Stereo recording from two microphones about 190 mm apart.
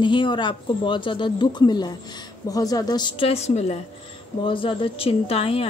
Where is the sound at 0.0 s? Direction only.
25° left (ahead or behind).